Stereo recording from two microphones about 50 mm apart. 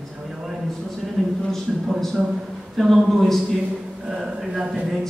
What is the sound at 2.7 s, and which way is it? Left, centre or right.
A woman's voice, centre.